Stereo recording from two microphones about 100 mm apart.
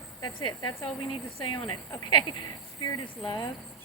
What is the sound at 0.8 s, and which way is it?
Speech, 60° left (ahead or behind).